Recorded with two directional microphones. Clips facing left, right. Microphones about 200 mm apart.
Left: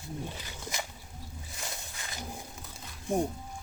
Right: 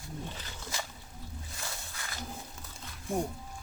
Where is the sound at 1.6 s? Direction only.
20° left (ahead or behind).